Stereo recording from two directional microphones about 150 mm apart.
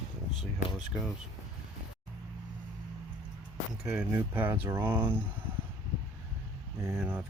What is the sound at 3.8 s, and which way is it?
Speech, 5° right (ahead or behind).